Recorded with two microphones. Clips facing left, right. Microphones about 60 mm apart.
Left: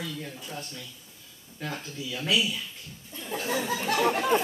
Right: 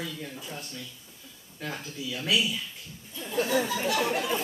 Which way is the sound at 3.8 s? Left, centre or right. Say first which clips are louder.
Left 2 dB; left.